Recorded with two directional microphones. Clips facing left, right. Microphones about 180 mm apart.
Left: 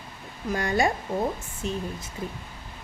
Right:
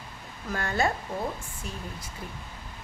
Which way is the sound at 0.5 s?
15° left (ahead or behind).